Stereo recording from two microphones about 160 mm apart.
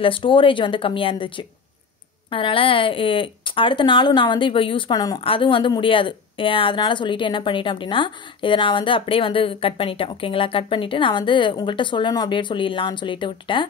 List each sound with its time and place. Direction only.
0.0 s speech: 30° left (ahead or behind)